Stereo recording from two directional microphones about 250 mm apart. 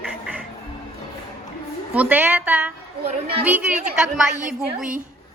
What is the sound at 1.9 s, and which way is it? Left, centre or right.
A woman's voice, centre.